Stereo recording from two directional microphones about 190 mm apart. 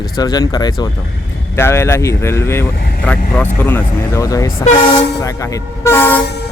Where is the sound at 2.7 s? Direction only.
55° left (ahead or behind).